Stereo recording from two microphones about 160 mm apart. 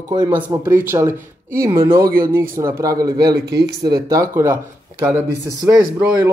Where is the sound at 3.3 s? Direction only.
90° right.